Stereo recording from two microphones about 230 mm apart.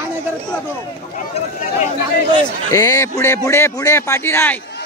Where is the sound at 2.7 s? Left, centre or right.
Centre.